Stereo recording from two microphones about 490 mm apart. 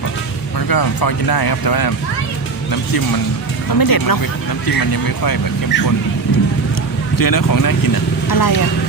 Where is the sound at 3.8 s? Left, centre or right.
Left.